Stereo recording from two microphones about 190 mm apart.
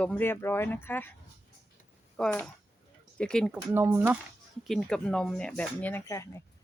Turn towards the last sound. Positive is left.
turn(degrees=15)  # may be behind; listen again after turning